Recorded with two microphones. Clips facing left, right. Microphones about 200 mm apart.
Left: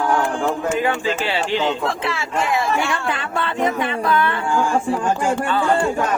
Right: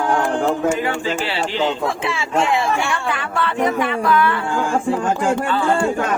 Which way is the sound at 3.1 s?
25° left (ahead or behind).